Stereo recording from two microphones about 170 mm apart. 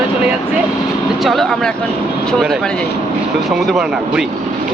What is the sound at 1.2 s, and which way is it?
Speech, centre (ahead or behind).